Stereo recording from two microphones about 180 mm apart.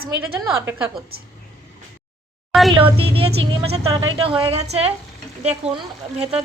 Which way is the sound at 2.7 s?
30° right (ahead or behind).